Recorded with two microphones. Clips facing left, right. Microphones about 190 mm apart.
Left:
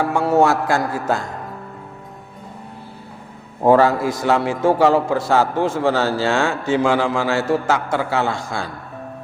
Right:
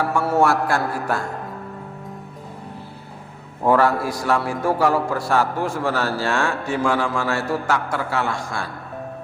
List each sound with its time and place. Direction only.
0.0 s a man's voice: 20° left (ahead or behind)
3.6 s a man's voice: 25° left (ahead or behind)